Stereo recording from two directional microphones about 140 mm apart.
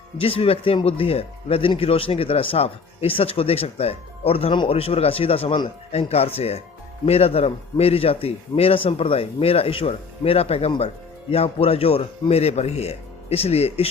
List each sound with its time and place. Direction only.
0.2 s speech: 45° left (ahead or behind)